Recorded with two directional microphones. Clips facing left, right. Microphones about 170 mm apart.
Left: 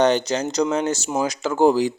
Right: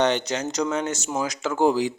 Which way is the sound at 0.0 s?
35° left (ahead or behind).